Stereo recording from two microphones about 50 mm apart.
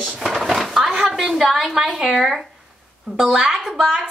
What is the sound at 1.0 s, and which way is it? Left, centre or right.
A woman's voice, centre.